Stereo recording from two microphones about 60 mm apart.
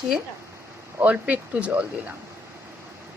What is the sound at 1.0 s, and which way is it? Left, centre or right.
Speech, right.